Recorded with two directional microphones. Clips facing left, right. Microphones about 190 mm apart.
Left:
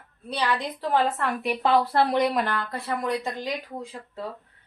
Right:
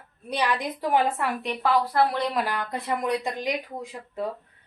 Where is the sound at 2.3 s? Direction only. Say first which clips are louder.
Left 1 dB; centre (ahead or behind).